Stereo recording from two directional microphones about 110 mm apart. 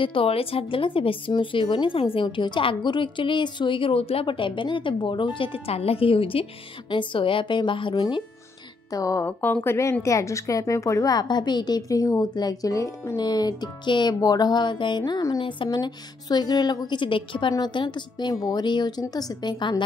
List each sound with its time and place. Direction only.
0.0 s a woman's voice: 55° left (ahead or behind)
8.9 s a woman's voice: 30° left (ahead or behind)
9.4 s a woman's voice: 15° left (ahead or behind); by 19.8 s 40° left (ahead or behind)